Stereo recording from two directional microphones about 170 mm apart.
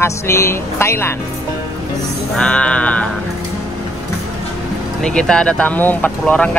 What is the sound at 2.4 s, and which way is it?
Speech, 5° left (ahead or behind).